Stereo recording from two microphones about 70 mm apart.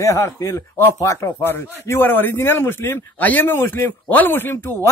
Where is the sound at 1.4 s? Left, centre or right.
Left.